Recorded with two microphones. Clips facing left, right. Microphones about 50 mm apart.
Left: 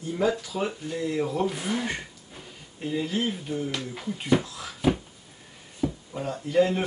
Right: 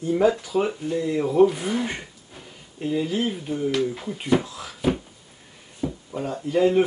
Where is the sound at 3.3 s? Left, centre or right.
Centre.